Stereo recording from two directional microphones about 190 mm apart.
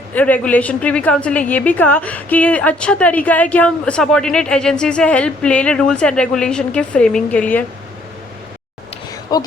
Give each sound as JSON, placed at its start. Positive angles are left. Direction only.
{"t": 0.1, "sound": "a woman's voice", "side_deg": 10}
{"t": 9.3, "sound": "speech", "side_deg": 20}